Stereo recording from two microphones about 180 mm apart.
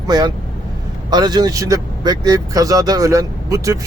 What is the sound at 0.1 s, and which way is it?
Speech, 20° right (ahead or behind).